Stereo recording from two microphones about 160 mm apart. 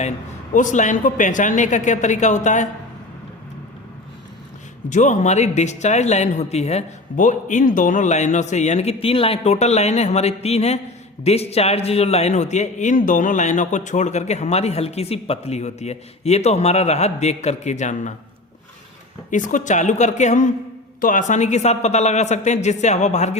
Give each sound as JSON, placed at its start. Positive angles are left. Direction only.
{"t": 0.5, "sound": "a man's voice", "side_deg": 50}
{"t": 4.9, "sound": "a man's voice", "side_deg": 50}
{"t": 19.3, "sound": "a man's voice", "side_deg": 55}